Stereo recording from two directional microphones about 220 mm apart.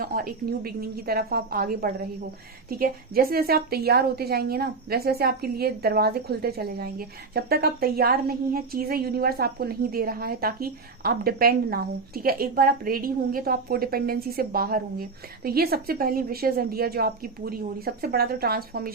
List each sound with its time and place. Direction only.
0.0 s a woman's voice: 40° right (ahead or behind)